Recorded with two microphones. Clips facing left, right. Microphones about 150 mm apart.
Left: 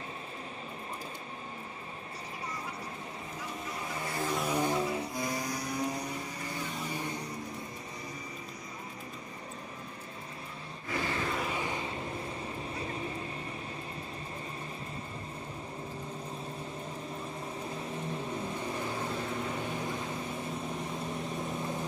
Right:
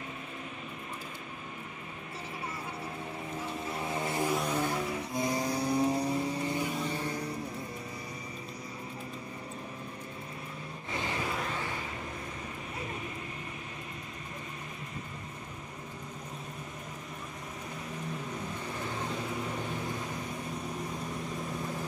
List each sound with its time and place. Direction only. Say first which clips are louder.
3.6 s vehicle: right 4 dB; 25° right (ahead or behind)
4.5 s vehicle: left 1 dB; 15° left (ahead or behind)
4.7 s vehicle: left 2 dB; 25° left (ahead or behind)
5.1 s vehicle: right 4 dB; 25° right (ahead or behind)
10.9 s a sound: left 2 dB; 20° right (ahead or behind)
11.3 s vehicle: left 2 dB; 10° left (ahead or behind)
12.7 s vehicle: left 1 dB; 30° left (ahead or behind)